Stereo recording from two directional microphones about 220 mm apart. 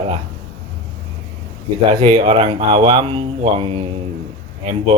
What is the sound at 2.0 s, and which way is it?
Speech, 20° right (ahead or behind).